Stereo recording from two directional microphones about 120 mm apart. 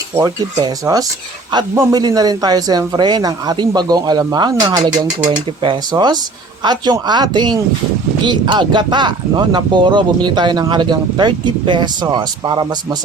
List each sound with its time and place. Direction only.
0.2 s speech: 30° right (ahead or behind)